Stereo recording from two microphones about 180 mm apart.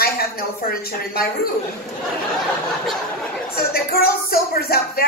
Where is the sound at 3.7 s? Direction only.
55° left (ahead or behind).